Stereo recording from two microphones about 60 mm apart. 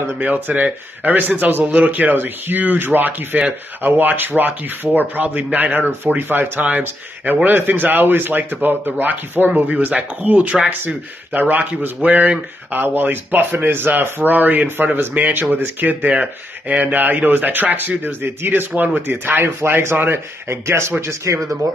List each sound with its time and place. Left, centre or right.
0.2 s a man's voice: right